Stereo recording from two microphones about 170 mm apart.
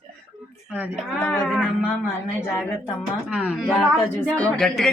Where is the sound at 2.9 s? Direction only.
Centre (ahead or behind).